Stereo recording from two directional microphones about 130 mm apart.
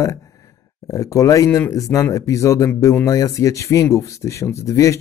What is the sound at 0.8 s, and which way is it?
Speech, 25° left (ahead or behind).